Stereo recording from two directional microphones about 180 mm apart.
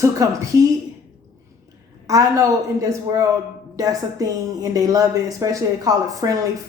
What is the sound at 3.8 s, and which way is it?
A woman's voice, 20° right (ahead or behind).